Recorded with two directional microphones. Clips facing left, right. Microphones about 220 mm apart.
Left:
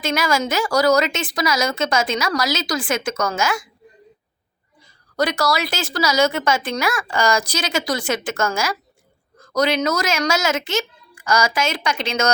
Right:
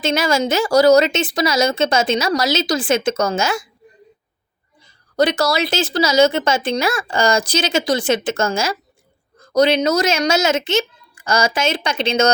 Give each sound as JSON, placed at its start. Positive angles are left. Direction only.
{"t": 0.0, "sound": "speech", "side_deg": -25}
{"t": 5.1, "sound": "speech", "side_deg": -20}